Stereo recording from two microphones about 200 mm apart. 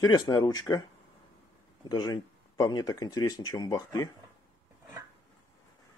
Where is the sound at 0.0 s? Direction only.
20° left (ahead or behind).